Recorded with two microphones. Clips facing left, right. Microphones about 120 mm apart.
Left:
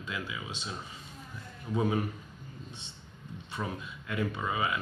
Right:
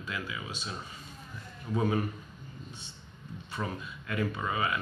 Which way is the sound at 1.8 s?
10° left (ahead or behind).